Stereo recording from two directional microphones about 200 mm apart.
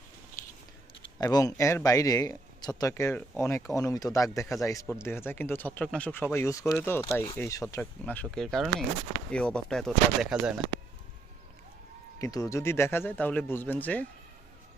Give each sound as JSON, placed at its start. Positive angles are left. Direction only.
{"t": 1.2, "sound": "speech", "side_deg": 15}
{"t": 12.2, "sound": "speech", "side_deg": 15}